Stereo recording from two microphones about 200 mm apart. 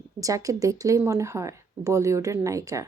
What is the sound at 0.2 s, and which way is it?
Speech, 15° right (ahead or behind).